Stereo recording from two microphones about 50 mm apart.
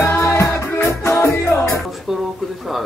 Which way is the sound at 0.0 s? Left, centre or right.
Left.